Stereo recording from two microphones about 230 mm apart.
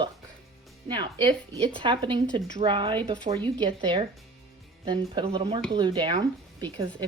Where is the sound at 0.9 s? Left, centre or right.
Centre.